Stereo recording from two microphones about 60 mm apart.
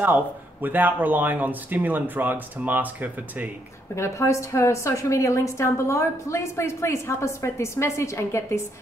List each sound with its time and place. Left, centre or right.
0.0 s speech: right
3.9 s a woman's voice: left